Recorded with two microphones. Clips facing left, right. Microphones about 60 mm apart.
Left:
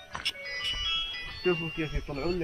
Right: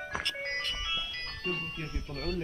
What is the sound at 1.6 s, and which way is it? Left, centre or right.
Speech, left.